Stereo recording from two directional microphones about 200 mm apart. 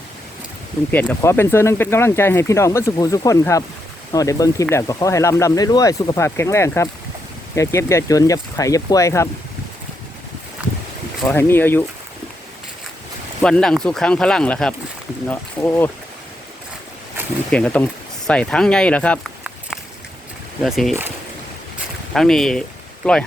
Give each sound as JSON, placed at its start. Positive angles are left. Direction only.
{"t": 0.9, "sound": "speech", "side_deg": 10}
{"t": 11.3, "sound": "speech", "side_deg": 10}
{"t": 13.4, "sound": "speech", "side_deg": 5}
{"t": 17.5, "sound": "speech", "side_deg": 5}
{"t": 20.7, "sound": "speech", "side_deg": 0}
{"t": 22.1, "sound": "speech", "side_deg": 0}